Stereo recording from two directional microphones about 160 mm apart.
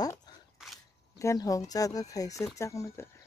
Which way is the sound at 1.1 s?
20° left (ahead or behind).